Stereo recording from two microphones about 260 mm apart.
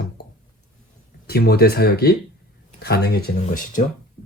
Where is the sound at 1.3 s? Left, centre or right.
Left.